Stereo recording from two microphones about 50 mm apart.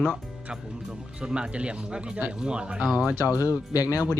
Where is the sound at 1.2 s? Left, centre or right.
Centre.